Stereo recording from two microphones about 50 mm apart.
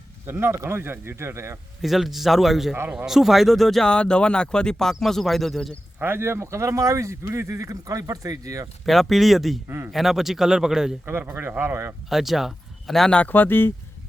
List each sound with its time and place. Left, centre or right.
0.3 s speech: right
1.8 s a man's voice: centre
3.8 s a man's voice: centre
6.0 s speech: right
8.9 s a man's voice: centre
9.6 s a man's voice: right
9.9 s speech: centre
11.0 s a man's voice: right
12.0 s speech: centre
13.2 s speech: left